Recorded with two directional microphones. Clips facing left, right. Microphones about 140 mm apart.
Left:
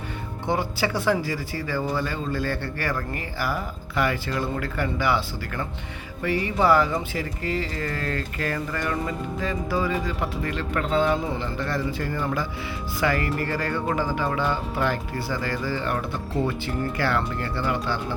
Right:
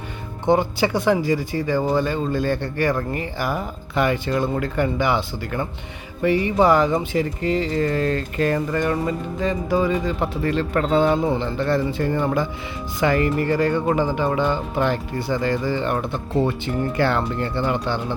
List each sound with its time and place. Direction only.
0.4 s speech: 25° right (ahead or behind)